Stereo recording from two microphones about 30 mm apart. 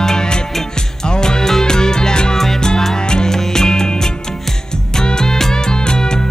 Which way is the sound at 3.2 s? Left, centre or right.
Centre.